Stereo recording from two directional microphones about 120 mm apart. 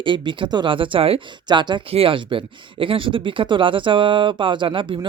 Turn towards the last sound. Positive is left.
turn(degrees=-45)  # may be behind; listen again after turning